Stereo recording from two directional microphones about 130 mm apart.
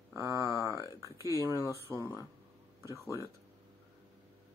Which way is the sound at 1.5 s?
25° left (ahead or behind).